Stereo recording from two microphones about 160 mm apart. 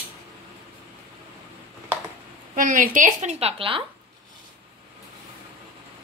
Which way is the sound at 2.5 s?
55° right (ahead or behind).